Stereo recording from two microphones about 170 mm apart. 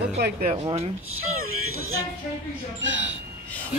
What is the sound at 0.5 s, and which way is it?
Speech, 35° right (ahead or behind).